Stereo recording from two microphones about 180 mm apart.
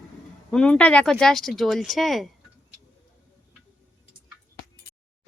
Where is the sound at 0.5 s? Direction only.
5° left (ahead or behind).